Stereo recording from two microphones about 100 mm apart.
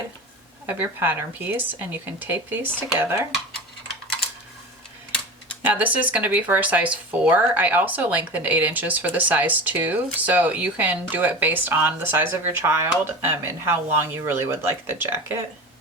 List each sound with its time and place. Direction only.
0.7 s speech: 20° right (ahead or behind)
5.6 s speech: 15° right (ahead or behind)